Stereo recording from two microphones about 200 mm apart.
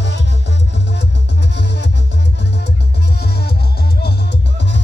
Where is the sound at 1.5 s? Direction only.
60° left (ahead or behind).